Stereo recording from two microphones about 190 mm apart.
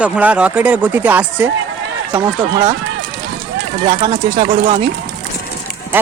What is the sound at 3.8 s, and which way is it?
Speech, 30° right (ahead or behind).